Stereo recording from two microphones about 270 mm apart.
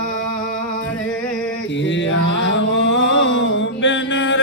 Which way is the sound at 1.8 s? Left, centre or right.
Left.